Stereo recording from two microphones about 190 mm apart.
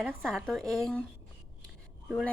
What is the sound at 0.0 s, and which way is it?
A woman's voice, 5° right (ahead or behind).